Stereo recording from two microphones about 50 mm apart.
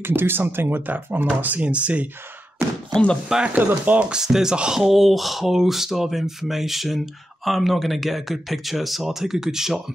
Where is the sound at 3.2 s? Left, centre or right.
Centre.